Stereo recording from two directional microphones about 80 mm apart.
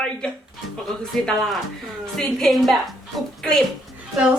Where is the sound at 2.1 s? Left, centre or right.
Centre.